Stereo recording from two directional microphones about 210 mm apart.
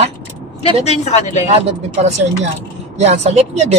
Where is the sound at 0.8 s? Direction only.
30° left (ahead or behind).